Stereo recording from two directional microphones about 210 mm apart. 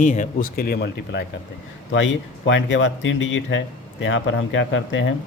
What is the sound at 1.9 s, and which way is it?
Speech, 60° left (ahead or behind).